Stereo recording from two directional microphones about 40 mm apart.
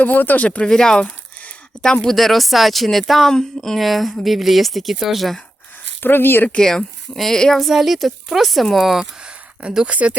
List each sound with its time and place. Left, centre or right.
0.0 s speech: left
0.4 s speech: left
0.7 s speech: centre
1.0 s a sound: left
1.8 s speech: centre
2.0 s speech: centre
3.8 s speech: centre
6.0 s speech: left
6.6 s speech: centre
7.6 s speech: centre
9.2 s a sound: right
9.8 s speech: right